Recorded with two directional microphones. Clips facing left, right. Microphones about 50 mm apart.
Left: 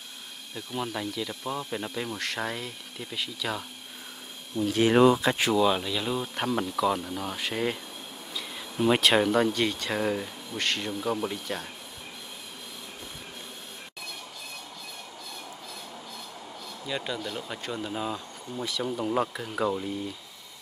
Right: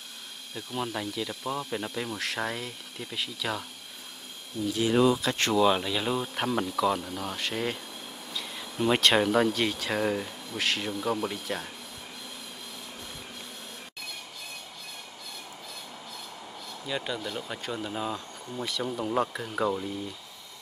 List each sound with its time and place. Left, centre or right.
0.6 s speech: centre
4.6 s speech: left
5.4 s speech: centre
16.8 s speech: centre